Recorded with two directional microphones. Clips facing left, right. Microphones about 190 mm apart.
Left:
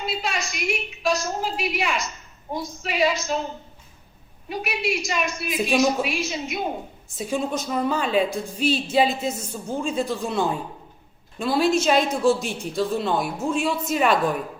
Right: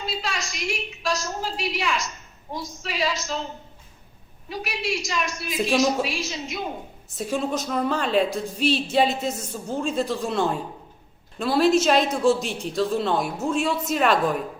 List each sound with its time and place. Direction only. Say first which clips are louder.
0.3 s a woman's voice: left 3 dB; 60° left (ahead or behind)
4.6 s a woman's voice: left 2 dB; 60° left (ahead or behind)
5.5 s speech: even; centre (ahead or behind)
6.1 s a woman's voice: left 3 dB; 60° left (ahead or behind)
7.2 s speech: even; centre (ahead or behind)